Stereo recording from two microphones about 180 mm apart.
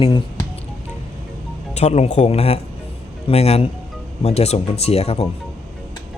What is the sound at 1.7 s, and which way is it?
Speech, 40° left (ahead or behind).